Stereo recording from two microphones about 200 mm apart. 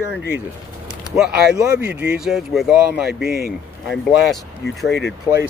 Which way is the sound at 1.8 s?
55° right (ahead or behind).